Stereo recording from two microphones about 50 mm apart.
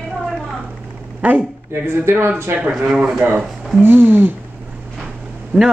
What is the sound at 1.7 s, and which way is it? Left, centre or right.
Speech, right.